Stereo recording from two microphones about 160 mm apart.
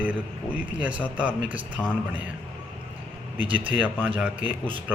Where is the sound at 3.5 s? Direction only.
10° right (ahead or behind).